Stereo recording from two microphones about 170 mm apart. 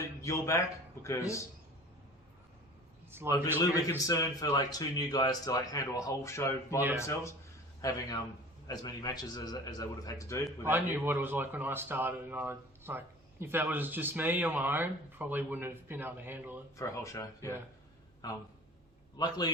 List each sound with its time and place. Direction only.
0.2 s a man's voice: 15° left (ahead or behind)
3.3 s speech: 15° right (ahead or behind)
3.6 s a man's voice: 20° left (ahead or behind)
10.7 s speech: 15° right (ahead or behind)
16.7 s speech: 20° left (ahead or behind)